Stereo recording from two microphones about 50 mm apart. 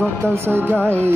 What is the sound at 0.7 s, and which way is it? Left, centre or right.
Speech, left.